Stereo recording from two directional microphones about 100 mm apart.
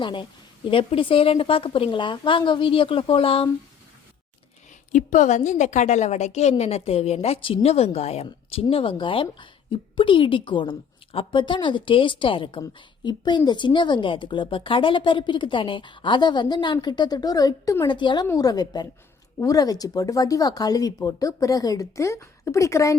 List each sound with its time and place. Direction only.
0.0 s a woman's voice: 55° left (ahead or behind)
6.1 s a woman's voice: 90° left
8.7 s a woman's voice: 65° left (ahead or behind)
13.1 s a woman's voice: 45° left (ahead or behind)
17.8 s a woman's voice: 50° left (ahead or behind)
18.3 s speech: 40° left (ahead or behind)